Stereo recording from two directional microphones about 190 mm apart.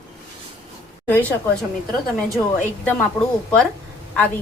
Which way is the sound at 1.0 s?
10° left (ahead or behind).